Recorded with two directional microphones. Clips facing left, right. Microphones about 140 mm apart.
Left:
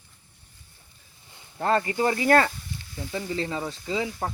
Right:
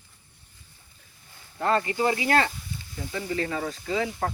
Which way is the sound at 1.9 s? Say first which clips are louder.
Left 3 dB; 45° left (ahead or behind).